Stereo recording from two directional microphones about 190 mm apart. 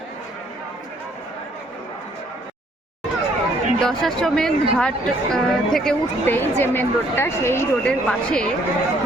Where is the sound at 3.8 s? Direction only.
Centre (ahead or behind).